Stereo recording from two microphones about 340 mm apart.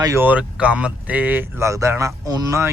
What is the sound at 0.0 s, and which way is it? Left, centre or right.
Speech, centre.